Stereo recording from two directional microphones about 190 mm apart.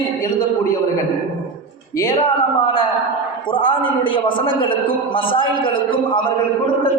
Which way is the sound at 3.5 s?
25° left (ahead or behind).